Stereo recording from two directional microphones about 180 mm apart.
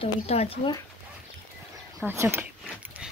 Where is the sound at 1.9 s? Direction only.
15° right (ahead or behind).